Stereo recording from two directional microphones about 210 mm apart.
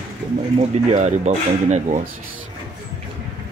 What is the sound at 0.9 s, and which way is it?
Speech, 35° right (ahead or behind).